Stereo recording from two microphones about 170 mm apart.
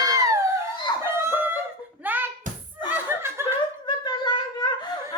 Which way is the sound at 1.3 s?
10° right (ahead or behind).